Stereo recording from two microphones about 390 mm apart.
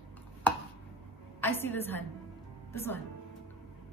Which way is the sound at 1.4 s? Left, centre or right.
Centre.